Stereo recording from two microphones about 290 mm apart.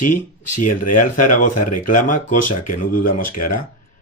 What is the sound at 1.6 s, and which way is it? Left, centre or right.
Speech, left.